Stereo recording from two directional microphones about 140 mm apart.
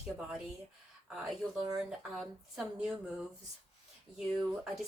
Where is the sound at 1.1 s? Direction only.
Centre (ahead or behind).